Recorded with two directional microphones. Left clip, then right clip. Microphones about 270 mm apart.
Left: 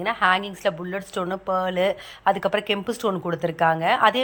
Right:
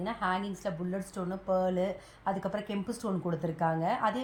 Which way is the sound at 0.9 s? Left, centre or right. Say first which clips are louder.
Left 10 dB; left.